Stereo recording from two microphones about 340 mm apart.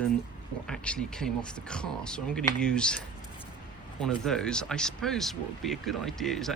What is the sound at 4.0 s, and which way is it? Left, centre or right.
Speech, centre.